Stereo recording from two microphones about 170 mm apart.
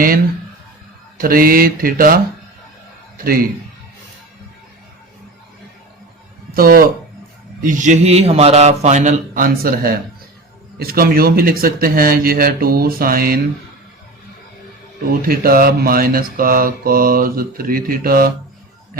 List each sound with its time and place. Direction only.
1.2 s mantra: 60° right (ahead or behind)
6.5 s speech: 60° right (ahead or behind)
7.6 s a man's voice: 50° right (ahead or behind)
10.8 s mantra: 60° right (ahead or behind)
15.3 s mantra: 60° right (ahead or behind)